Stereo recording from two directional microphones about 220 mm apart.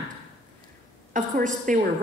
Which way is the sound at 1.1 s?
35° right (ahead or behind).